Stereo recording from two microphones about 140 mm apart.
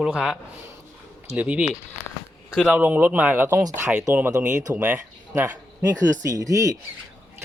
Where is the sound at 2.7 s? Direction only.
10° right (ahead or behind).